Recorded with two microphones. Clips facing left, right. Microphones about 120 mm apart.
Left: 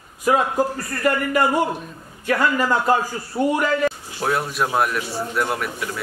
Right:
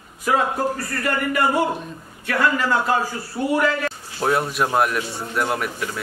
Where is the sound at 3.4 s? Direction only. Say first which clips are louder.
Left 4 dB; 25° left (ahead or behind).